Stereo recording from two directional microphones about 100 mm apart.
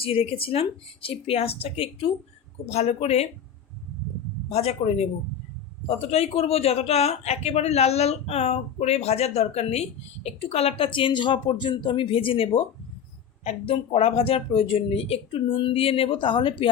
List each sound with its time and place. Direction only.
0.0 s speech: 75° left (ahead or behind)
2.6 s speech: 90° left
4.4 s speech: 90° left; by 12.6 s 65° left (ahead or behind)
13.4 s speech: 90° left; by 16.7 s 55° left (ahead or behind)